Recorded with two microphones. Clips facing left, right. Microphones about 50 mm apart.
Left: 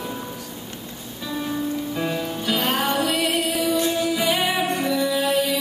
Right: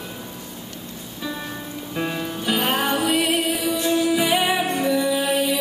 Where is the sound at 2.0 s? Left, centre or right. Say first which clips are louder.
Left 1 dB; centre.